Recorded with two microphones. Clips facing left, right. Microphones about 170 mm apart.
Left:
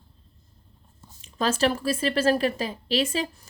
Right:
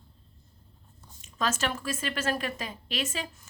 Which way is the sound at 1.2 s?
35° left (ahead or behind).